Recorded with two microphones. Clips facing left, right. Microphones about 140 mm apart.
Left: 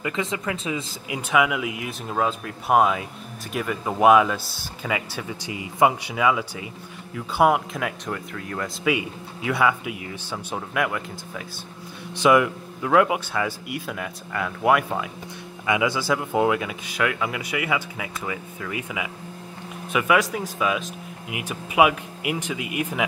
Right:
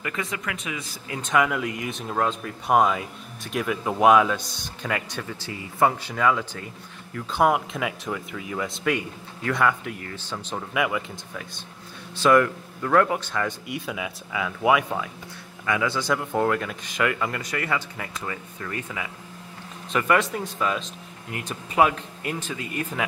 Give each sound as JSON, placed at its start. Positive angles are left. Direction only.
{"t": 0.0, "sound": "speech", "side_deg": 20}
{"t": 1.0, "sound": "speech", "side_deg": 10}
{"t": 15.6, "sound": "speech", "side_deg": 15}